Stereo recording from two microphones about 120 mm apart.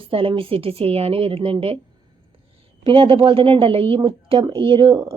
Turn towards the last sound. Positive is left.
turn(degrees=-45)  # may be behind; listen again after turning